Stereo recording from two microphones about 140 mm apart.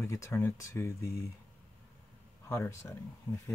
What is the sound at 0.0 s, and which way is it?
Speech, 20° left (ahead or behind).